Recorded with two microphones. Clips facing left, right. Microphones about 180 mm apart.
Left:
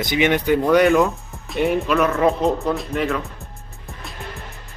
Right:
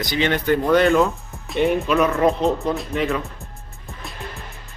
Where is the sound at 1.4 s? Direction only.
Centre (ahead or behind).